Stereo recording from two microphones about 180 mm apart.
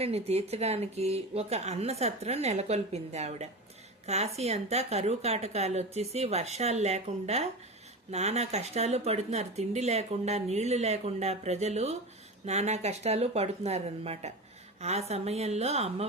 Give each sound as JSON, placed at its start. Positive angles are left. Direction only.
{"t": 0.0, "sound": "speech", "side_deg": -35}